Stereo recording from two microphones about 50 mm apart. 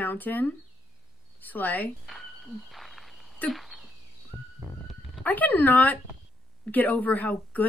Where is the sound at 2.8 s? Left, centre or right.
Centre.